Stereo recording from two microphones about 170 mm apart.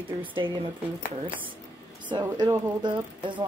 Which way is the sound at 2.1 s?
25° right (ahead or behind).